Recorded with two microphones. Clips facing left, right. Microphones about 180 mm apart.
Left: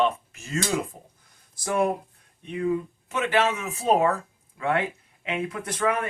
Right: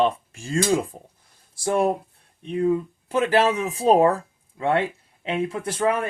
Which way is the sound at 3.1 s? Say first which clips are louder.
Right 4 dB; 35° right (ahead or behind).